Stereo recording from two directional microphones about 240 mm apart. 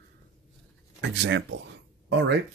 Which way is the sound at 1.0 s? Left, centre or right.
Right.